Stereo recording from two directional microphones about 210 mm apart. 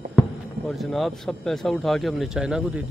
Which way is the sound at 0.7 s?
Centre (ahead or behind).